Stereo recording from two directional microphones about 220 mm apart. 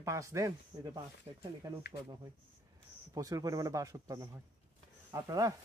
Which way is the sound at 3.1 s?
15° right (ahead or behind).